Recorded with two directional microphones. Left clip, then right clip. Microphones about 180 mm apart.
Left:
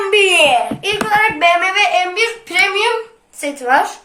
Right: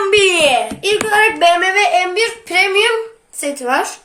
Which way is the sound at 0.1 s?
55° right (ahead or behind).